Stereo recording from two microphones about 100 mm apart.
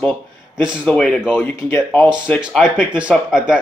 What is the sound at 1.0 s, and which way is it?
Speech, 5° left (ahead or behind).